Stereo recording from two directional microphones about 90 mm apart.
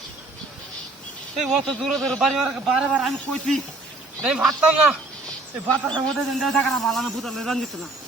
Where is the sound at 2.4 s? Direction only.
10° right (ahead or behind).